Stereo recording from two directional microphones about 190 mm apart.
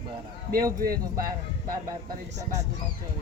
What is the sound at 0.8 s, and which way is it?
Speech, 50° right (ahead or behind).